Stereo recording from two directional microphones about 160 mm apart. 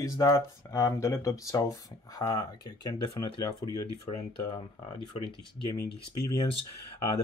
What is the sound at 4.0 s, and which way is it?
Speech, 30° left (ahead or behind).